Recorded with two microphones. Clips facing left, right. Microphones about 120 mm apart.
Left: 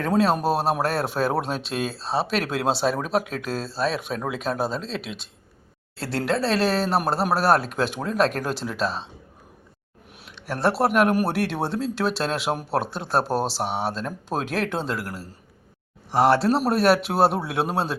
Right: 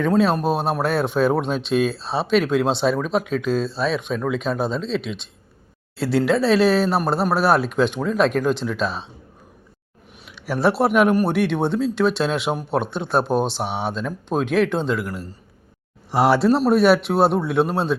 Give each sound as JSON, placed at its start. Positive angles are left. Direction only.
{"t": 0.0, "sound": "speech", "side_deg": 5}
{"t": 10.3, "sound": "speech", "side_deg": 0}